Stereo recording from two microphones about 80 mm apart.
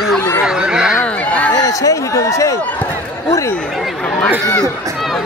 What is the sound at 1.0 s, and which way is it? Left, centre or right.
Speech, centre.